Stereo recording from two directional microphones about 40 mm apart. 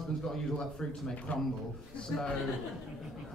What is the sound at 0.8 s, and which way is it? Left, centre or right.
Speech, left.